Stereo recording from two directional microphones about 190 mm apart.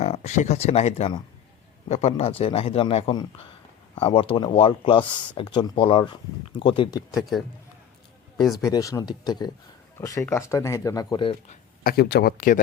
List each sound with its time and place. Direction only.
0.0 s a man's voice: 35° left (ahead or behind)
7.1 s speech: centre (ahead or behind)
8.6 s speech: 15° left (ahead or behind)
11.8 s speech: 50° left (ahead or behind)